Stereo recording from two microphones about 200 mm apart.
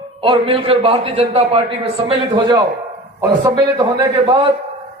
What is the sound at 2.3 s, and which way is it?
A man's voice, 20° right (ahead or behind).